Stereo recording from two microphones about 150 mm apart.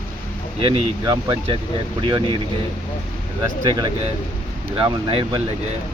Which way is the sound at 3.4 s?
25° right (ahead or behind).